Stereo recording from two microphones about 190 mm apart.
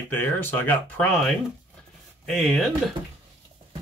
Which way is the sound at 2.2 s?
Centre (ahead or behind).